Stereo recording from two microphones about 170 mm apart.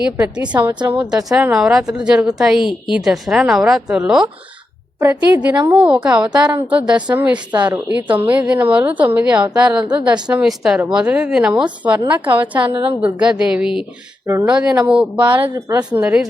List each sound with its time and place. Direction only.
0.0 s a woman's voice: 5° right (ahead or behind)
7.3 s speech: 25° right (ahead or behind)
7.9 s speech: 10° right (ahead or behind)
12.6 s speech: 30° right (ahead or behind)
13.0 s a woman's voice: 5° right (ahead or behind)
15.5 s speech: 20° right (ahead or behind)
16.0 s speech: 5° right (ahead or behind)